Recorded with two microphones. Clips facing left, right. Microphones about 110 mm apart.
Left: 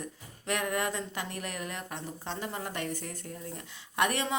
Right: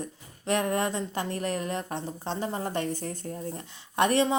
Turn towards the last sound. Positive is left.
turn(degrees=-30)  # may be behind; listen again after turning